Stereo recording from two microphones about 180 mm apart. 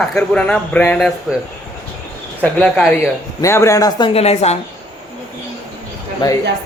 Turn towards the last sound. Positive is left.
turn(degrees=25)  # may be behind; listen again after turning